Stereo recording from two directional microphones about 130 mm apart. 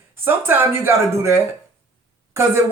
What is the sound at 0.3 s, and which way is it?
A man's voice, 15° right (ahead or behind).